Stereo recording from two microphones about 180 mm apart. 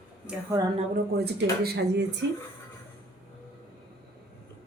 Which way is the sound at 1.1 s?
65° right (ahead or behind).